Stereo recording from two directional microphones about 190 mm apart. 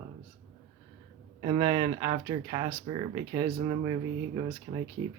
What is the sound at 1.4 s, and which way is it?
Speech, 30° right (ahead or behind).